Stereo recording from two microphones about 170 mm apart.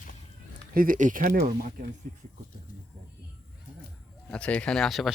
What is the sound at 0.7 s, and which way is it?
Speech, 55° right (ahead or behind).